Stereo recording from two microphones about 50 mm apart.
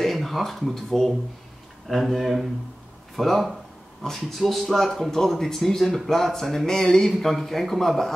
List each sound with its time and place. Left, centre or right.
0.0 s speech: centre